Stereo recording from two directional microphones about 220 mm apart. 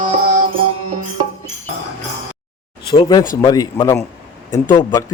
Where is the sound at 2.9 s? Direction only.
20° left (ahead or behind).